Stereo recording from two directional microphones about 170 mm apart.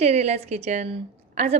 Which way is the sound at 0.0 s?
40° right (ahead or behind).